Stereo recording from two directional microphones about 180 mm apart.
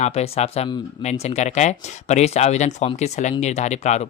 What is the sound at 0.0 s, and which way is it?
Speech, 35° left (ahead or behind).